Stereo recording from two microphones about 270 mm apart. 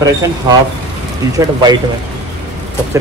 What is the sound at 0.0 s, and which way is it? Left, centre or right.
Speech, centre.